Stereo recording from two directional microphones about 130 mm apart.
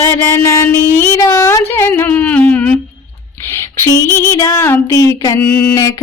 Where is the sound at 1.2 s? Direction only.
25° left (ahead or behind).